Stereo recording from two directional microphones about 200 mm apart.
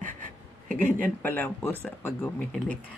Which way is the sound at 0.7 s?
40° right (ahead or behind).